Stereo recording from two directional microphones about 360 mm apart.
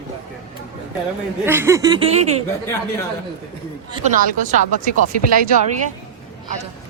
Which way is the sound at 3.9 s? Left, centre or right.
Right.